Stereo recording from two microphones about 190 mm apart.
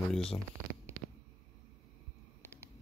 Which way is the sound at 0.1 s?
5° left (ahead or behind).